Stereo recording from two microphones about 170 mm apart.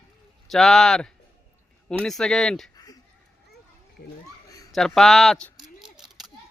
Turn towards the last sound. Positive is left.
turn(degrees=0)  # may be behind; listen again after turning